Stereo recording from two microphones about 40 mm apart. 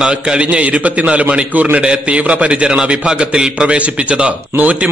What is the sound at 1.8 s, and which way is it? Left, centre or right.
A man's voice, right.